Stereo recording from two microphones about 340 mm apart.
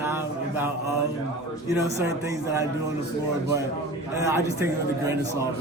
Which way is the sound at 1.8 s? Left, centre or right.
Centre.